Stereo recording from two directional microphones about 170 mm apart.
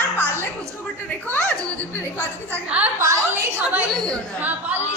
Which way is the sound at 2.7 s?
15° right (ahead or behind).